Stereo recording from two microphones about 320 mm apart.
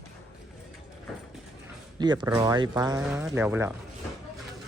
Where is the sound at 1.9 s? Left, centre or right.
Centre.